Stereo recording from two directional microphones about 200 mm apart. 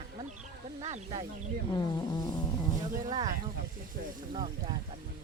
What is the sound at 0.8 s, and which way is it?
Snake, 30° right (ahead or behind).